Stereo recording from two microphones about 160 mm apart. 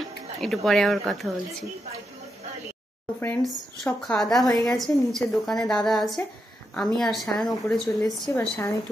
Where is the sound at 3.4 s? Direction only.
Centre (ahead or behind).